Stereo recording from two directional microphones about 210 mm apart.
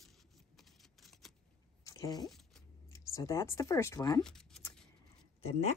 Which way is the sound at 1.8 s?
15° left (ahead or behind).